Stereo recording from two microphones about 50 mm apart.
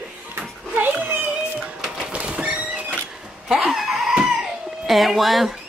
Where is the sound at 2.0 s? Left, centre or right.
Centre.